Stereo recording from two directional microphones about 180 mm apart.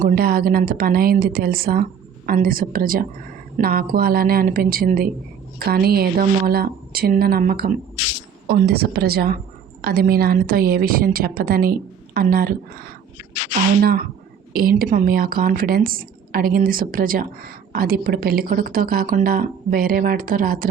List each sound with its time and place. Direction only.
0.0 s speech: 55° right (ahead or behind)
14.5 s speech: 55° right (ahead or behind)